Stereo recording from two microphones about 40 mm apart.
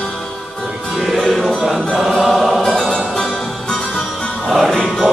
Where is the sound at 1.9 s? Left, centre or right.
Centre.